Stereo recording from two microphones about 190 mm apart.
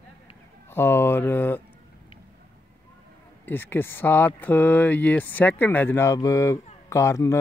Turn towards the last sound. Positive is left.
turn(degrees=15)  # may be behind; listen again after turning